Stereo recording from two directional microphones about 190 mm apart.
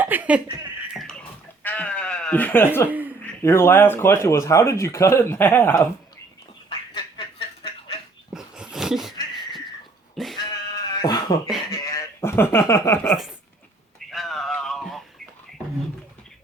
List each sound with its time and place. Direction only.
0.0 s speech: 10° right (ahead or behind)
1.6 s bleat: 10° left (ahead or behind)
3.4 s speech: 15° left (ahead or behind)
6.7 s duck: 25° left (ahead or behind)
8.3 s dog: 5° right (ahead or behind)
10.3 s sheep: 20° left (ahead or behind)
11.7 s speech: 20° left (ahead or behind)
14.1 s a sound: centre (ahead or behind)